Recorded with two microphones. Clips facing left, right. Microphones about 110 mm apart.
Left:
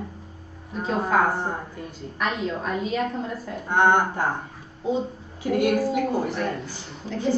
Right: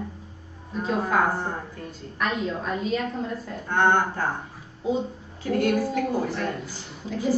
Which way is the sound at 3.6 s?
15° left (ahead or behind).